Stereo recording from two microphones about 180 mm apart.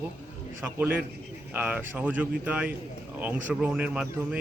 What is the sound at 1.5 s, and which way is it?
Speech, 10° right (ahead or behind).